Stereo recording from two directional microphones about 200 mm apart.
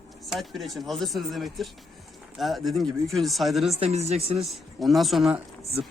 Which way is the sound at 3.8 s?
30° right (ahead or behind).